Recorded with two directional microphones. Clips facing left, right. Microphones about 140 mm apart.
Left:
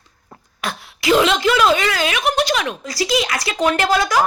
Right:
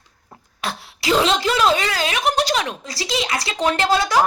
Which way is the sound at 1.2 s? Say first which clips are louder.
Even; 35° right (ahead or behind).